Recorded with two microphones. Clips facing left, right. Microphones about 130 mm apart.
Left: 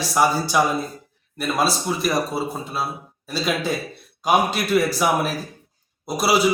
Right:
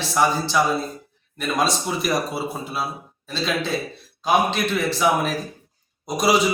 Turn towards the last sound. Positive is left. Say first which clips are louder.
# right 2 dB
turn(degrees=5)  # may be behind; listen again after turning